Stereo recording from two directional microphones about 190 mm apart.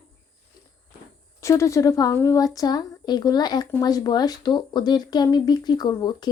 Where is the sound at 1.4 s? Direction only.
15° left (ahead or behind).